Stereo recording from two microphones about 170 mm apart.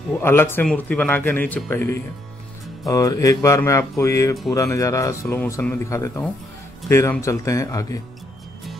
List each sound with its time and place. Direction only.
0.2 s speech: 15° left (ahead or behind)